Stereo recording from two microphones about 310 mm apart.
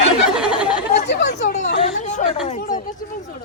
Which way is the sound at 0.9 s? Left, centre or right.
Left.